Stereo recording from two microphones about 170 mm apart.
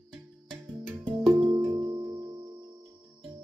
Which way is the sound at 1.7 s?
15° right (ahead or behind).